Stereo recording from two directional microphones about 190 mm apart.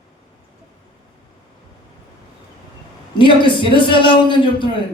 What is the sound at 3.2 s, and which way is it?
Speech, 25° left (ahead or behind).